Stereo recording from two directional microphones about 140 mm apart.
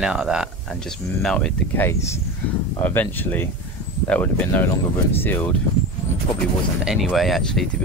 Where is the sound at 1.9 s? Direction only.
20° left (ahead or behind).